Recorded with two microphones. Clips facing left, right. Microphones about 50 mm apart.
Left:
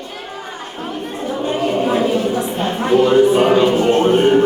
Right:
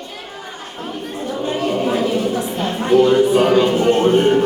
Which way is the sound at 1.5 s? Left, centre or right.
Centre.